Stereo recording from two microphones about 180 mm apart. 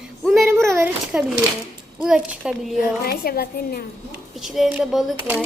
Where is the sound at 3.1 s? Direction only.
60° left (ahead or behind).